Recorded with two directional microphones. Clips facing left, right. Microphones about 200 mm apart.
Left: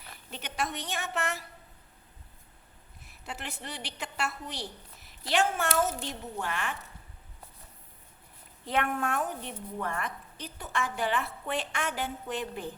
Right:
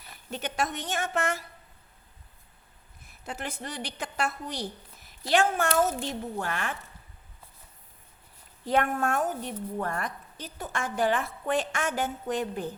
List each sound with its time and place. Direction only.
0.3 s a woman's voice: 45° right (ahead or behind)
3.2 s a woman's voice: 45° right (ahead or behind)
8.6 s a woman's voice: 40° right (ahead or behind)